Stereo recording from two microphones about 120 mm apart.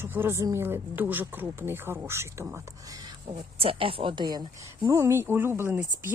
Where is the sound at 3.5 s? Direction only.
50° right (ahead or behind).